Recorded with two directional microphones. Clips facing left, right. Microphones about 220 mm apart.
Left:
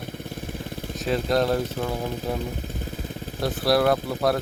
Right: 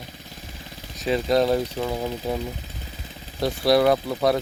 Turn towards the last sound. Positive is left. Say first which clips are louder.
# right 2 dB
turn(degrees=0)  # may be behind; listen again after turning